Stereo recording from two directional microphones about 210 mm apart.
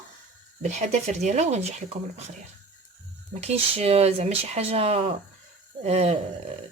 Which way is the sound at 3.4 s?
30° right (ahead or behind).